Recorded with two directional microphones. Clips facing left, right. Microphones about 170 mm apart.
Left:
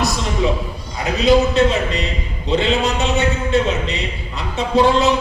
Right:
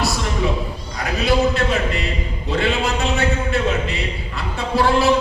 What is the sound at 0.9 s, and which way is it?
A man's voice, 20° left (ahead or behind).